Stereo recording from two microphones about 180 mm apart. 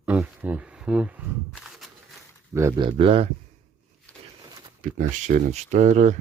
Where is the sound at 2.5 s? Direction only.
15° right (ahead or behind).